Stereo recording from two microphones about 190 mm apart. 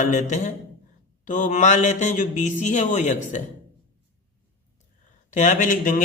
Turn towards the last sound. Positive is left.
turn(degrees=45)  # may be behind; listen again after turning